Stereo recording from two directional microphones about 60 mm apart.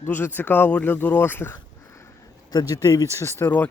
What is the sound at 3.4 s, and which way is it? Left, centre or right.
Speech, left.